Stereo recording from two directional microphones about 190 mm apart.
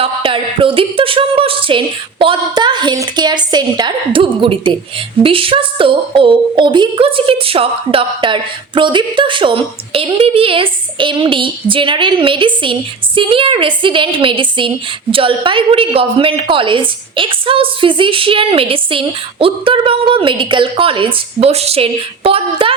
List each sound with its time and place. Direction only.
0.0 s a woman's voice: 25° right (ahead or behind)